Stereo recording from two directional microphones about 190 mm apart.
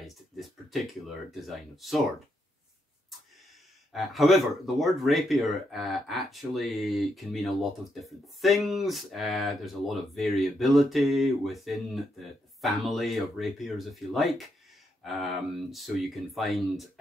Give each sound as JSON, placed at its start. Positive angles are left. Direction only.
{"t": 0.0, "sound": "speech", "side_deg": 0}
{"t": 3.9, "sound": "speech", "side_deg": 0}